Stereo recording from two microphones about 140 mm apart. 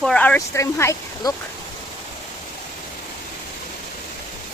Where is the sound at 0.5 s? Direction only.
20° left (ahead or behind).